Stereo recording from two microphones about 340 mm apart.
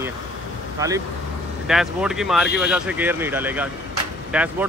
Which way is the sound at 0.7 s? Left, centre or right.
Centre.